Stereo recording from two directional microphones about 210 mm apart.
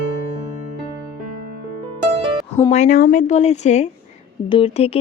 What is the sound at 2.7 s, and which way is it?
Speech, 35° left (ahead or behind).